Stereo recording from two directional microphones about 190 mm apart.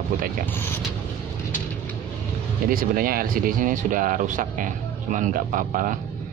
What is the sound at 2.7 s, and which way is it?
Speech, 50° right (ahead or behind).